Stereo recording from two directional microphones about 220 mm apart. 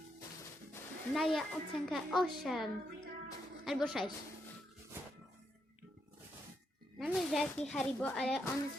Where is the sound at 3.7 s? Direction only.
Centre (ahead or behind).